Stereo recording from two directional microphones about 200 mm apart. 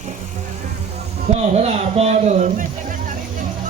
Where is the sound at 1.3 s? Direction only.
35° right (ahead or behind).